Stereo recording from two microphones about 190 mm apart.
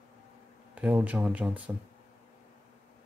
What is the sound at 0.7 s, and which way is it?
Speech, 10° right (ahead or behind).